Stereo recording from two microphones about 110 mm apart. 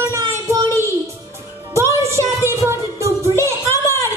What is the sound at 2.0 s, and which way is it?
Music, 25° right (ahead or behind).